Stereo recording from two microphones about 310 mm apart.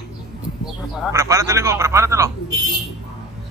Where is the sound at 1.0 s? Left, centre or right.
Centre.